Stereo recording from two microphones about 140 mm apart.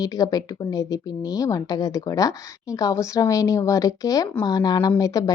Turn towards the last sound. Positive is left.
turn(degrees=25)  # may be behind; listen again after turning